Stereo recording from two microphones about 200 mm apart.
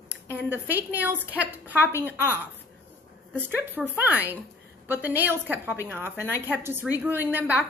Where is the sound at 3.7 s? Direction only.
10° right (ahead or behind).